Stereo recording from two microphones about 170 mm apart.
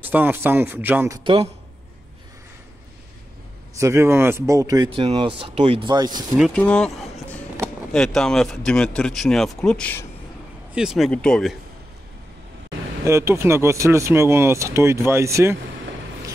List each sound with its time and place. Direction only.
0.0 s speech: 10° right (ahead or behind)
1.2 s speech: 30° right (ahead or behind)
3.7 s speech: 15° right (ahead or behind)
4.9 s speech: 30° right (ahead or behind)
6.3 s speech: 5° left (ahead or behind)
10.7 s speech: 5° right (ahead or behind)
13.0 s speech: 15° right (ahead or behind)